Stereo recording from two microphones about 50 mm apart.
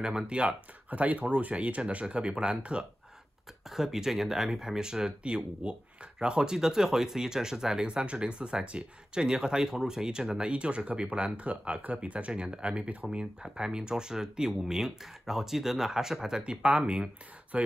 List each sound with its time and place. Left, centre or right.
0.0 s speech: centre
3.7 s speech: centre